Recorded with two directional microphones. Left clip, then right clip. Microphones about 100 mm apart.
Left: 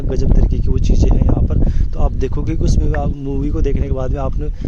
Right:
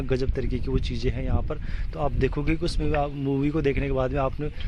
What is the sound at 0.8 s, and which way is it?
Speech, 60° left (ahead or behind).